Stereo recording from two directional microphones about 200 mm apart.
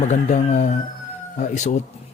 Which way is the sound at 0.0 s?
35° left (ahead or behind).